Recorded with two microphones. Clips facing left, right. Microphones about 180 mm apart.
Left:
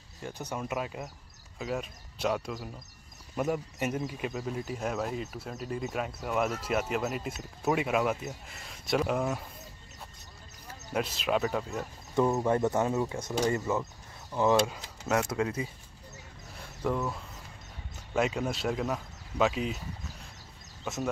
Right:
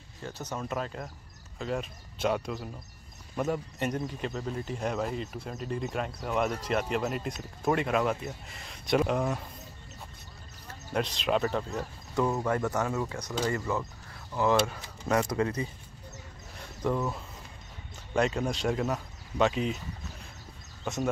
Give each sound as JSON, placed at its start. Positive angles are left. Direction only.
{"t": 0.2, "sound": "speech", "side_deg": 10}
{"t": 10.7, "sound": "speech", "side_deg": 5}
{"t": 12.4, "sound": "speech", "side_deg": 25}
{"t": 15.0, "sound": "speech", "side_deg": 5}
{"t": 16.9, "sound": "speech", "side_deg": 0}
{"t": 20.8, "sound": "speech", "side_deg": 0}